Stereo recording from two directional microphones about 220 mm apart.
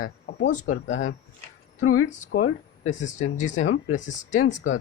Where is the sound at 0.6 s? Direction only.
70° left (ahead or behind).